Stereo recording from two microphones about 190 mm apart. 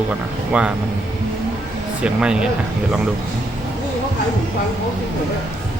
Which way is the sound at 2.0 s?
5° right (ahead or behind).